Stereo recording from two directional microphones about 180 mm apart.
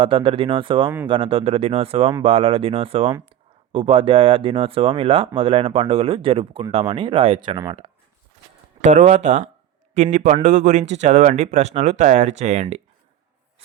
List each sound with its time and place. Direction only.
0.0 s speech: 30° right (ahead or behind)
8.8 s a man's voice: 40° right (ahead or behind)